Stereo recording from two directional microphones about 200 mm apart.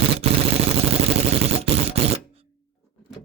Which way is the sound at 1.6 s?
30° right (ahead or behind).